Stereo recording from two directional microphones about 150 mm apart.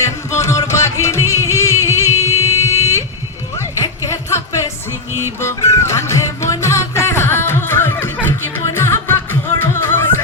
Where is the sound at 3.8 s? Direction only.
20° left (ahead or behind).